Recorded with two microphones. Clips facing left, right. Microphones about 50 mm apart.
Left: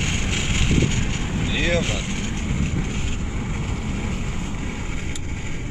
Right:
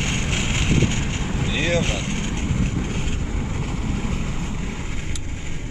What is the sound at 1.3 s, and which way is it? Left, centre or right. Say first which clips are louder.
Vehicle: even; centre.